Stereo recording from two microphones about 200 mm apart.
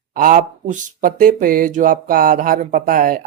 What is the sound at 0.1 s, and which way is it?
Speech, 45° right (ahead or behind).